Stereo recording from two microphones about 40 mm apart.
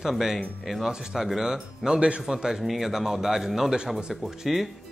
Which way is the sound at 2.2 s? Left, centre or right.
Centre.